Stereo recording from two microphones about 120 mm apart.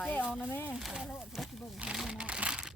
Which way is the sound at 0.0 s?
15° left (ahead or behind).